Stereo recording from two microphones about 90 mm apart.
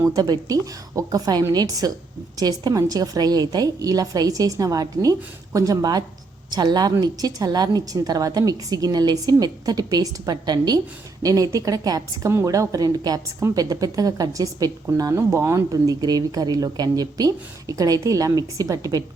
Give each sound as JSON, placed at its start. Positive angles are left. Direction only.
{"t": 0.0, "sound": "a woman's voice", "side_deg": -40}
{"t": 15.1, "sound": "speech", "side_deg": -30}